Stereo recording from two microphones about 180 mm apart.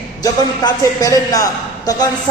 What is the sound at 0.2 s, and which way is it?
A woman's voice, 20° left (ahead or behind).